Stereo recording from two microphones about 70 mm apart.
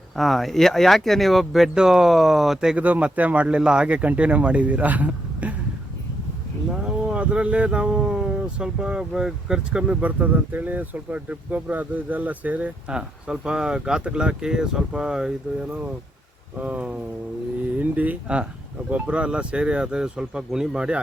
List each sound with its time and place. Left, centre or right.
0.2 s speech: centre
2.7 s speech: right
6.7 s speech: centre
16.6 s speech: right